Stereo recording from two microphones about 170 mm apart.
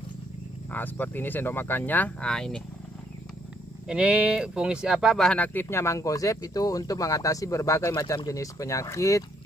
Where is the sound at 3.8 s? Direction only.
5° right (ahead or behind); by 9.2 s 20° left (ahead or behind).